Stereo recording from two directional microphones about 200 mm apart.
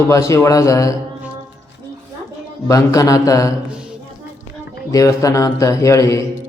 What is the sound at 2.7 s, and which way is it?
Speech, 15° left (ahead or behind).